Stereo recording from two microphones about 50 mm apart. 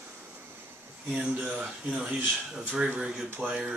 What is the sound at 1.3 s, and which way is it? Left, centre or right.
Speech, right.